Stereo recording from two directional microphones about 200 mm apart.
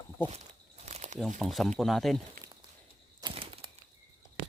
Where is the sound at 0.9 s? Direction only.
35° right (ahead or behind).